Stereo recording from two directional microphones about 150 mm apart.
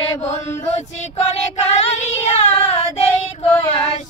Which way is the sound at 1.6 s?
45° left (ahead or behind).